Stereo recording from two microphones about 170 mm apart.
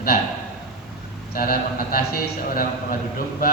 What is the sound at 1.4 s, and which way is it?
Speech, 60° left (ahead or behind).